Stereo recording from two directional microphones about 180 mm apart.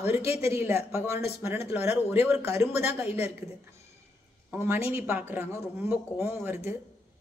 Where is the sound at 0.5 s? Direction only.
15° right (ahead or behind).